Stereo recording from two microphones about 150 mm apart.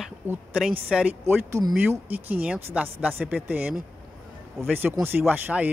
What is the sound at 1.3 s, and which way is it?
Speech, 20° right (ahead or behind).